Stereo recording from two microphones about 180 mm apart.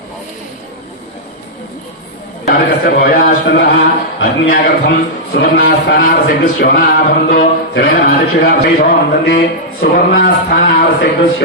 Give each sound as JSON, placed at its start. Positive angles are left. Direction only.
{"t": 2.5, "sound": "speech", "side_deg": 55}